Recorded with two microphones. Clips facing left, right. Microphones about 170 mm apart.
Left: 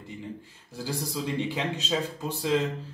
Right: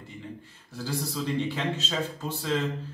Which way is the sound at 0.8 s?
15° left (ahead or behind).